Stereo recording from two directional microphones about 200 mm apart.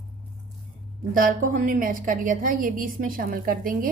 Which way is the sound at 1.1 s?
45° right (ahead or behind).